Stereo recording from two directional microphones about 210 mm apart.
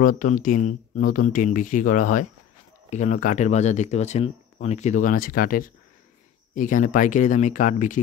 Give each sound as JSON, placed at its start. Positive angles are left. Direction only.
{"t": 0.0, "sound": "speech", "side_deg": 40}